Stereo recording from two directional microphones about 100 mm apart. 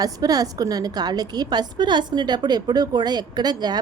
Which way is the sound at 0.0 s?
40° right (ahead or behind).